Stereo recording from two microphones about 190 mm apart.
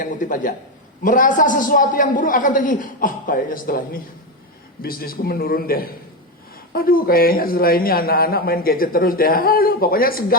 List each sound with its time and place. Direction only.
0.0 s a man's voice: 45° left (ahead or behind)